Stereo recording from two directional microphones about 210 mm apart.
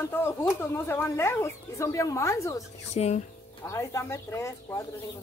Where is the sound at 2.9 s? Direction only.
30° left (ahead or behind).